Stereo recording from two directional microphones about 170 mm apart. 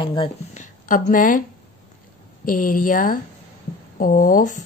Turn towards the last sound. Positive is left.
turn(degrees=50)  # may be behind; listen again after turning